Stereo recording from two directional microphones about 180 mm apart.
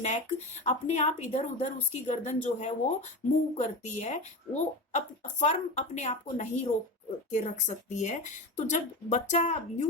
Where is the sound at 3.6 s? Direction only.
40° left (ahead or behind).